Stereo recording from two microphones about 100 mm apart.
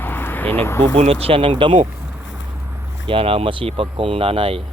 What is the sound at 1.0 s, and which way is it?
Speech, 85° right.